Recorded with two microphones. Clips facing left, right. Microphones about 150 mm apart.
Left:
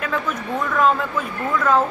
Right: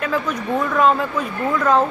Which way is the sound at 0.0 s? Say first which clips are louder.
Right 2 dB; centre (ahead or behind).